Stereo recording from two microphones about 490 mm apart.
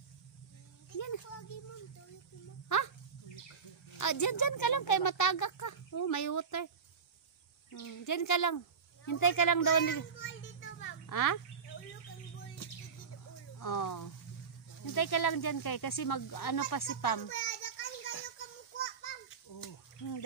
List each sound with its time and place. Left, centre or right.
0.9 s a sound: left
2.7 s speech: left
4.0 s speech: left
7.8 s speech: left
10.1 s children playing: left
11.1 s a child's voice: left
13.6 s speech: left
17.3 s a sound: left
19.6 s a sound: left